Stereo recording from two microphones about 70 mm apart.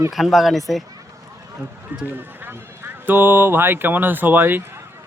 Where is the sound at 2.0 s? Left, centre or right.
Right.